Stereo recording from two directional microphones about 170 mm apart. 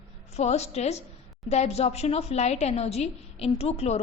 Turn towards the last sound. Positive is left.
turn(degrees=40)  # may be behind; listen again after turning